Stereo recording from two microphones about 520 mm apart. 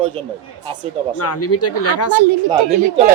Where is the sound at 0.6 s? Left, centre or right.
Centre.